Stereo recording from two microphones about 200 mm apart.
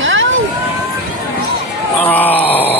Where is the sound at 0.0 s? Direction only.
70° right (ahead or behind).